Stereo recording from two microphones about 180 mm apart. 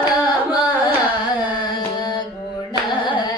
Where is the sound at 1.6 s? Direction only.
25° left (ahead or behind).